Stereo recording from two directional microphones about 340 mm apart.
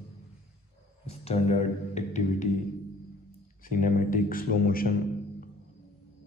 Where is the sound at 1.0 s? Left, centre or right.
Centre.